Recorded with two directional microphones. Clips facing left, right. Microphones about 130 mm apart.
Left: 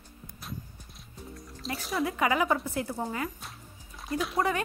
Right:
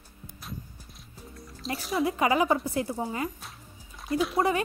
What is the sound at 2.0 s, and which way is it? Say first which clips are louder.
Speech: right 3 dB; 30° right (ahead or behind).